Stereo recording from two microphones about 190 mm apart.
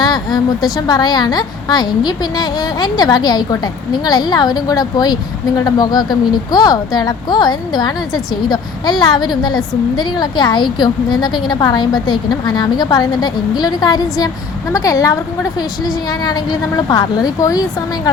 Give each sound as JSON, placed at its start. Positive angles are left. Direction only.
{"t": 0.0, "sound": "a woman's voice", "side_deg": 20}
{"t": 16.2, "sound": "a woman's voice", "side_deg": 20}